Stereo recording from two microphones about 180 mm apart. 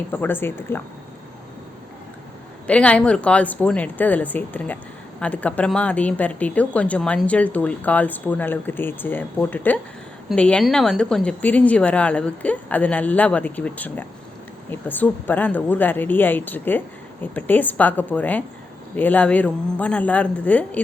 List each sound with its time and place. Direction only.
0.1 s speech: 10° left (ahead or behind)
2.6 s speech: 5° left (ahead or behind)